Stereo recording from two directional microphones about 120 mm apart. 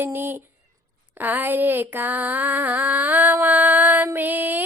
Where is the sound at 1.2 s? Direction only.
15° right (ahead or behind).